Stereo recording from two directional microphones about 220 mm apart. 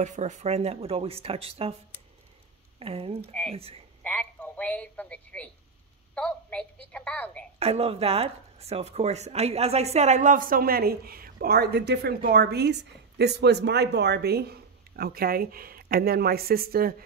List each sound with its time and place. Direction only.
0.0 s speech: 35° right (ahead or behind)
2.8 s speech: 25° right (ahead or behind)
4.0 s a sound: 5° left (ahead or behind)
6.1 s a woman's voice: 5° left (ahead or behind)
7.5 s speech: 25° right (ahead or behind); by 16.9 s 45° right (ahead or behind)